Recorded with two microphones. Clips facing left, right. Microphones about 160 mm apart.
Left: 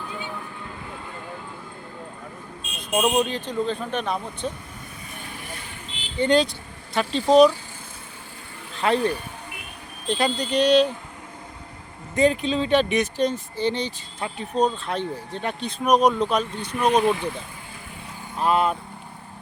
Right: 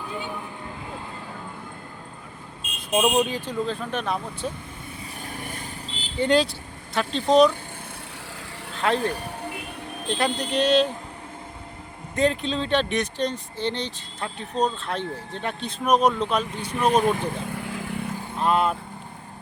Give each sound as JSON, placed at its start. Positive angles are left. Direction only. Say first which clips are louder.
{"t": 2.9, "sound": "speech", "louder": "even", "side_deg": -10}
{"t": 6.1, "sound": "speech", "louder": "left 1 dB", "side_deg": 0}
{"t": 8.8, "sound": "speech", "louder": "left 2 dB", "side_deg": 0}
{"t": 12.1, "sound": "speech", "louder": "left 3 dB", "side_deg": 0}
{"t": 17.5, "sound": "vehicle", "louder": "right 10 dB", "side_deg": -85}
{"t": 18.3, "sound": "speech", "louder": "left 1 dB", "side_deg": 0}